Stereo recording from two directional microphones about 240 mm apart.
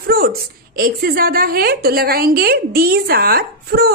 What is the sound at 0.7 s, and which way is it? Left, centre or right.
A woman's voice, right.